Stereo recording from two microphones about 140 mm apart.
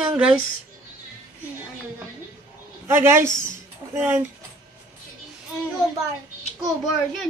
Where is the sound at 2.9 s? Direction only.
20° right (ahead or behind).